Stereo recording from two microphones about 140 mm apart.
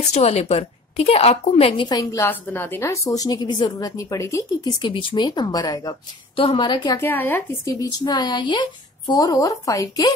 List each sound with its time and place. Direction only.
0.1 s speech: 50° left (ahead or behind)
1.9 s speech: 25° left (ahead or behind)
4.8 s speech: 35° left (ahead or behind)
6.3 s speech: 40° left (ahead or behind)
7.0 s speech: 15° left (ahead or behind)